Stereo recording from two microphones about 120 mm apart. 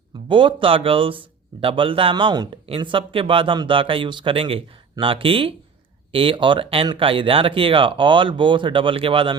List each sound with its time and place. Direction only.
0.3 s speech: 45° right (ahead or behind)